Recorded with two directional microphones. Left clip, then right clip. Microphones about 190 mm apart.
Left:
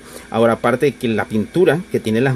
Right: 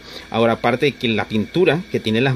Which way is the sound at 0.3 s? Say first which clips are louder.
Left 2 dB; 5° right (ahead or behind).